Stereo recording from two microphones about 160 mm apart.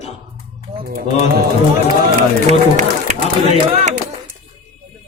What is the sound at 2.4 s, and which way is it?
Speech, 50° right (ahead or behind).